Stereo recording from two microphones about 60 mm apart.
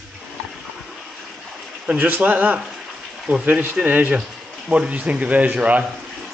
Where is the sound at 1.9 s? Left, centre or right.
Right.